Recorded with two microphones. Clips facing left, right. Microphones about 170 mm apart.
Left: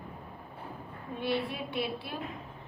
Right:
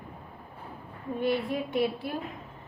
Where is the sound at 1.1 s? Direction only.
45° right (ahead or behind).